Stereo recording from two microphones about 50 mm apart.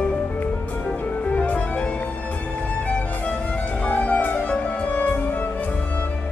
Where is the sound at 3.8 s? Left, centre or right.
Left.